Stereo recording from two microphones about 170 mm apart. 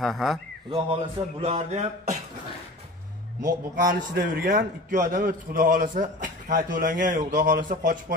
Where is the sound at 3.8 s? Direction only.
55° right (ahead or behind).